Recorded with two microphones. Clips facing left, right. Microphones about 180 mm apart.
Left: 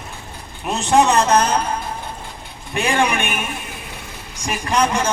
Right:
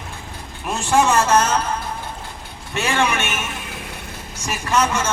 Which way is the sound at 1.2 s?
15° left (ahead or behind).